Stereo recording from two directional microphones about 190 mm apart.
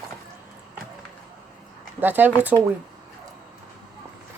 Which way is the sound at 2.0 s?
10° right (ahead or behind).